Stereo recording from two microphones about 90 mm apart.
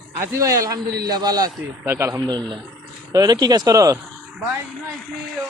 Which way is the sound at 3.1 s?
45° right (ahead or behind).